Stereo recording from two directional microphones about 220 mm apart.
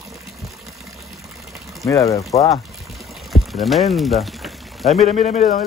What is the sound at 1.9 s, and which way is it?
Speech, 15° left (ahead or behind).